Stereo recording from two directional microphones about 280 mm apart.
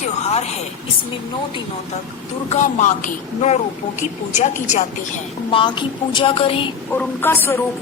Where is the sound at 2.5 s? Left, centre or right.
Left.